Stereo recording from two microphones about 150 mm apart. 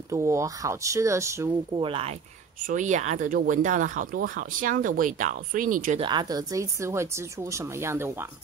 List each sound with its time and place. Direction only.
0.1 s speech: 20° right (ahead or behind)
1.8 s speech: 40° right (ahead or behind)
2.6 s speech: 55° right (ahead or behind)
5.9 s speech: 30° right (ahead or behind)